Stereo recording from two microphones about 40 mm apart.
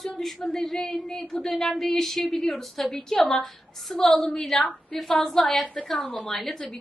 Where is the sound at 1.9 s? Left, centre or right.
Centre.